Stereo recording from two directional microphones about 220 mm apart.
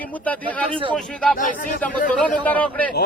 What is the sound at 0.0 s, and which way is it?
Speech, 5° left (ahead or behind).